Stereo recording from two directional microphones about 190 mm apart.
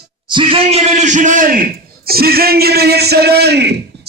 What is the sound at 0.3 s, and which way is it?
A man's voice, 25° right (ahead or behind).